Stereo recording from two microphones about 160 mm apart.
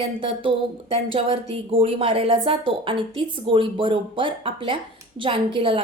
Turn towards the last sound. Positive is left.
turn(degrees=-35)  # may be behind; listen again after turning